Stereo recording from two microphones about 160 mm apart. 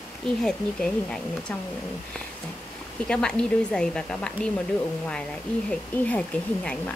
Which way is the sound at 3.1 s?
5° left (ahead or behind).